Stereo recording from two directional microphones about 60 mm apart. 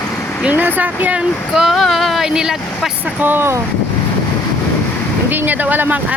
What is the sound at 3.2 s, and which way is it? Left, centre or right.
Speech, right.